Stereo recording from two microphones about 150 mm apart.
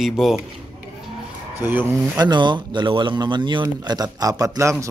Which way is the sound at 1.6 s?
15° right (ahead or behind).